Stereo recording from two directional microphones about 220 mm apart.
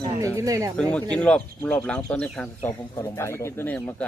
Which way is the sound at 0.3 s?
15° right (ahead or behind).